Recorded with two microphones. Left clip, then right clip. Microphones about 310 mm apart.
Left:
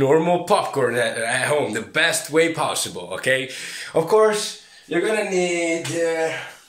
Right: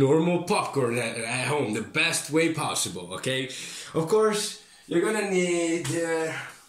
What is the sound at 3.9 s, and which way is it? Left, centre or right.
Speech, left.